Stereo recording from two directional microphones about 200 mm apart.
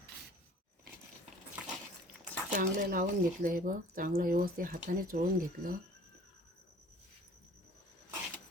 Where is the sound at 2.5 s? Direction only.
40° right (ahead or behind).